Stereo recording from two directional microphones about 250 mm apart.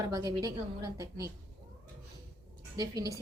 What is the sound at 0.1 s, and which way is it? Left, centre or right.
A woman's voice, centre.